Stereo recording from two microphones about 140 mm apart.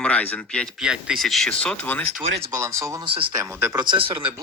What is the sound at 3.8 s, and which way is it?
Speech, 35° right (ahead or behind).